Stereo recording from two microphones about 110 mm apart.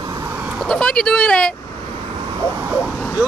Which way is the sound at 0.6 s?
5° left (ahead or behind).